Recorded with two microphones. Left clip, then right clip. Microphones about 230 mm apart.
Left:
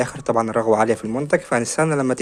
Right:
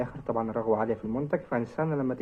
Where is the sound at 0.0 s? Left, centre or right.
Left.